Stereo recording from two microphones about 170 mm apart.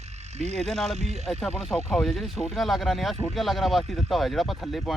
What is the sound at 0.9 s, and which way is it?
Speech, 40° right (ahead or behind).